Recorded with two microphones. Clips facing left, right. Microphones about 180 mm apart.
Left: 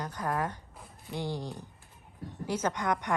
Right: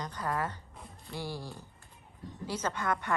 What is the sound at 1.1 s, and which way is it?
A woman's voice, 20° left (ahead or behind).